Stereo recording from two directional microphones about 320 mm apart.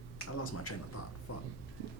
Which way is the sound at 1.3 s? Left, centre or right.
Left.